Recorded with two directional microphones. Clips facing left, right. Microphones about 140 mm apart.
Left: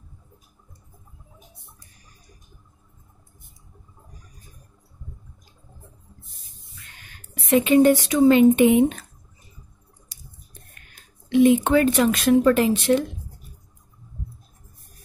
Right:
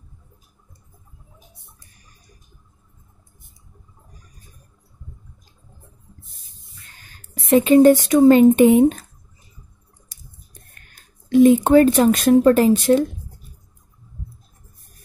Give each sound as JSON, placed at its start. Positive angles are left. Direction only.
{"t": 6.8, "sound": "speech", "side_deg": -35}
{"t": 10.1, "sound": "a sound", "side_deg": -45}
{"t": 10.7, "sound": "speech", "side_deg": -40}